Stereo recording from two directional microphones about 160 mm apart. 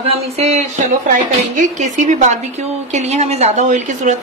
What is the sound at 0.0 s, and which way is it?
A woman's voice, 40° right (ahead or behind).